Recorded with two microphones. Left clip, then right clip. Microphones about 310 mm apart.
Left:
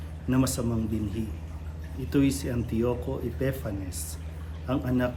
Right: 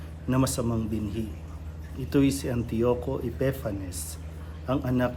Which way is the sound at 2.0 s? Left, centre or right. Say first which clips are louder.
Right 1 dB; centre.